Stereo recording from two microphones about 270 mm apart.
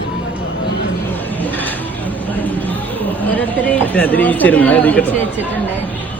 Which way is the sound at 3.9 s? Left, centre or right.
Centre.